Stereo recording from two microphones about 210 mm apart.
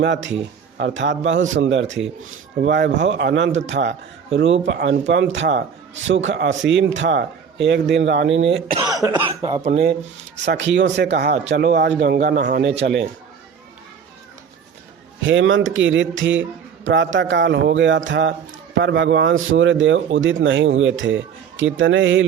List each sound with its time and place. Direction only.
0.0 s a man's voice: 60° right (ahead or behind)
8.7 s speech: 20° right (ahead or behind)
10.4 s speech: 55° right (ahead or behind)
15.2 s a man's voice: 65° right (ahead or behind)